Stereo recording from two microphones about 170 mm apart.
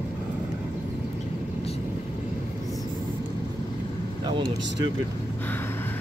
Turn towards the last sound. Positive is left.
turn(degrees=-25)  # may be behind; listen again after turning